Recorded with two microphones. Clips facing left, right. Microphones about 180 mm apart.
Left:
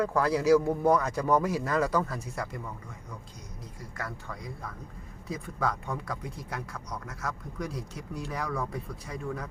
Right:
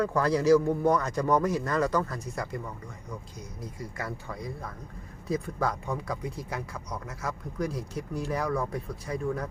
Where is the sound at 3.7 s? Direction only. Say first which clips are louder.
Right 2 dB; 10° right (ahead or behind).